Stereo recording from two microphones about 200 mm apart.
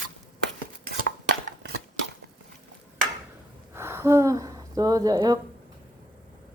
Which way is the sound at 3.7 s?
10° right (ahead or behind).